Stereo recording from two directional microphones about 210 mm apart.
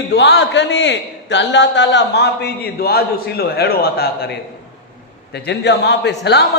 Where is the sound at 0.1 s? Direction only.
55° left (ahead or behind).